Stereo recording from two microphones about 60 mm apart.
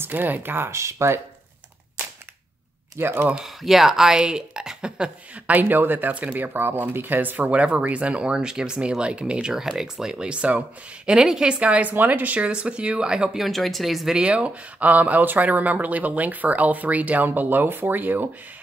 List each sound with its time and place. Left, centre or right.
0.0 s speech: right
0.7 s speech: right
3.0 s speech: right
3.4 s a woman's voice: centre
13.4 s speech: centre
14.1 s speech: centre; by 18.3 s right